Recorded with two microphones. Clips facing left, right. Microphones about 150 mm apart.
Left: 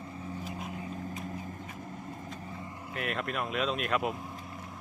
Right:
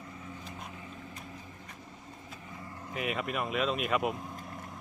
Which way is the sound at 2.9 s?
Centre (ahead or behind).